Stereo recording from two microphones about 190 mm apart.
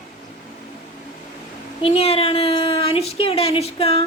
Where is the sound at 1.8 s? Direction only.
30° left (ahead or behind).